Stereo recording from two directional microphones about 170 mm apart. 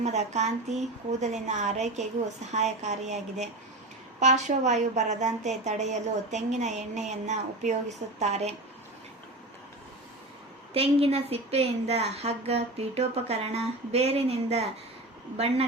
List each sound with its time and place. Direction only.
0.0 s a woman's voice: 40° right (ahead or behind)
10.8 s speech: 35° right (ahead or behind)